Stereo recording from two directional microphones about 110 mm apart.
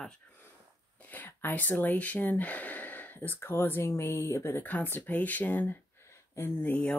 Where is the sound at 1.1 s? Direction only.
15° left (ahead or behind).